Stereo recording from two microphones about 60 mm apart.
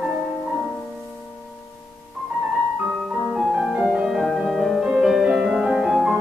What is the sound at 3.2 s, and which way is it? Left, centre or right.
Music, centre.